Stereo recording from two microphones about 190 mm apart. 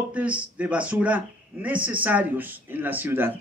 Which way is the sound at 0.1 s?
5° right (ahead or behind).